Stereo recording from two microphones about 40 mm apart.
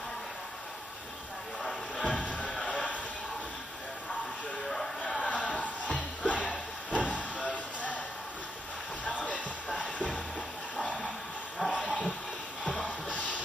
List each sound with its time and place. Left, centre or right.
1.6 s music: centre
2.0 s music: left
2.7 s a sound: left
5.2 s music: left
9.0 s music: left
10.8 s a sound: left